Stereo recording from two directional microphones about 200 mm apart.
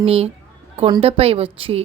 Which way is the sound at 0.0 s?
30° right (ahead or behind).